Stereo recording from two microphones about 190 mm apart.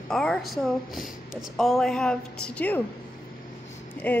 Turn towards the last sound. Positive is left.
turn(degrees=10)  # may be behind; listen again after turning